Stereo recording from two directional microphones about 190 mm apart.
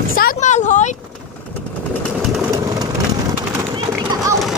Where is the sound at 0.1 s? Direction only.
45° left (ahead or behind).